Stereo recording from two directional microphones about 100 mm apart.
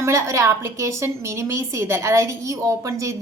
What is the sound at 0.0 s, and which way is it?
A woman's voice, 30° right (ahead or behind).